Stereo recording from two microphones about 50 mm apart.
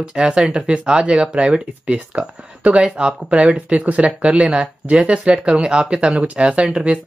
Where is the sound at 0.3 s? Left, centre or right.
Centre.